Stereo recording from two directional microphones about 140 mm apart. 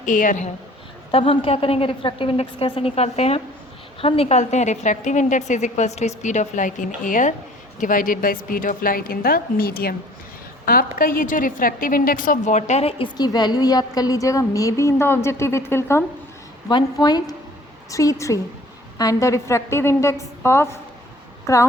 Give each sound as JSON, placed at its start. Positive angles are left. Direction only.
{"t": 0.0, "sound": "a woman's voice", "side_deg": 70}
{"t": 1.1, "sound": "a woman's voice", "side_deg": 40}
{"t": 13.1, "sound": "a woman's voice", "side_deg": 30}
{"t": 16.6, "sound": "a woman's voice", "side_deg": 30}